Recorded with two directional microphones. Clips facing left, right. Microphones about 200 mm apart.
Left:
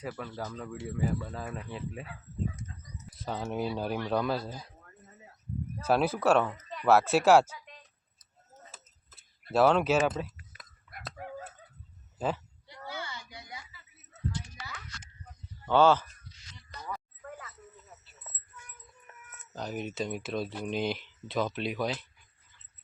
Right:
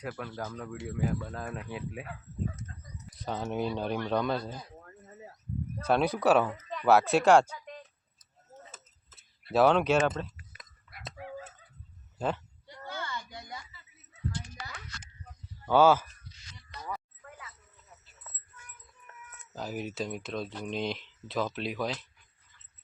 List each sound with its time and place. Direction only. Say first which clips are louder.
0.0 s speech: even; 5° right (ahead or behind)
3.2 s speech: right 1 dB; centre (ahead or behind)
5.8 s speech: even; 5° left (ahead or behind)
9.5 s speech: even; centre (ahead or behind)
12.2 s speech: even; 5° left (ahead or behind)
12.6 s a sound: right 1 dB; 50° right (ahead or behind)
15.6 s speech: right 1 dB; 10° right (ahead or behind)
17.2 s a sound: left 5 dB; 45° left (ahead or behind)
19.4 s speech: even; 5° right (ahead or behind)